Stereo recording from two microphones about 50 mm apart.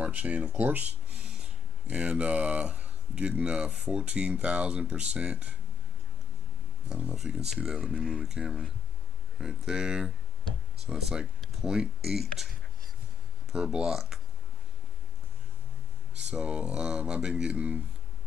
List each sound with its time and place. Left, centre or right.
0.0 s speech: right
7.2 s speech: centre
11.1 s speech: centre
13.5 s speech: centre
16.2 s speech: centre